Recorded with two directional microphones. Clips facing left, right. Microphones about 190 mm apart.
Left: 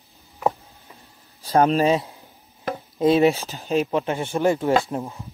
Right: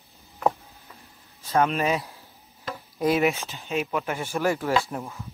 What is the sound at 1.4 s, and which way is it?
Speech, 35° left (ahead or behind).